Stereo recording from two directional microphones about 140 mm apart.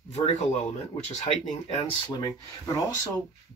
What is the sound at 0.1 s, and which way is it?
Speech, 50° left (ahead or behind).